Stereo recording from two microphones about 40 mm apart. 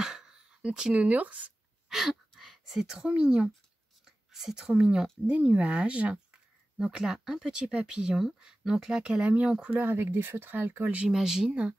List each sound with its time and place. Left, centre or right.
0.0 s a sound: centre
1.0 s speech: right
1.9 s a sound: centre
3.0 s speech: right
4.0 s whispering: centre
4.6 s speech: right
6.8 s speech: centre
9.2 s speech: right
9.7 s speech: right
11.1 s speech: centre